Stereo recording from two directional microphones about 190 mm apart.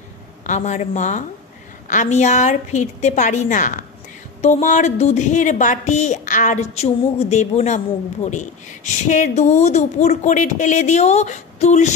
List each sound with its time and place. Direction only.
0.5 s a woman's voice: 35° left (ahead or behind)